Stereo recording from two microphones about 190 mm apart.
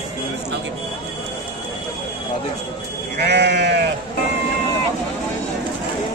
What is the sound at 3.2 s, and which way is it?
Sheep, 65° right (ahead or behind).